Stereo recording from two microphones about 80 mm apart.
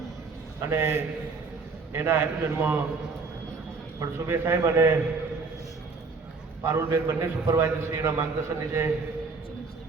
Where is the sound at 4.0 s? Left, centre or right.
Right.